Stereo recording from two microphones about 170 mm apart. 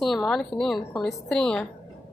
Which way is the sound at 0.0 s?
Centre (ahead or behind).